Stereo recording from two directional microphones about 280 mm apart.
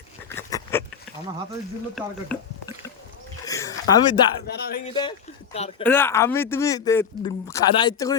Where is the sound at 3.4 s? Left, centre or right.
Centre.